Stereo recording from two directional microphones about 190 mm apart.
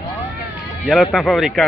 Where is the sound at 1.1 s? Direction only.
Centre (ahead or behind).